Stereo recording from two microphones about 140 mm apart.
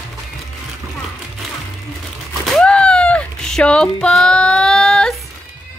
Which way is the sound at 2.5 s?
5° left (ahead or behind).